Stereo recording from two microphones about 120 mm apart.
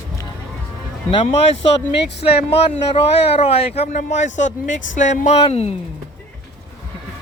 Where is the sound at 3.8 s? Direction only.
75° left (ahead or behind); by 5.7 s 60° left (ahead or behind).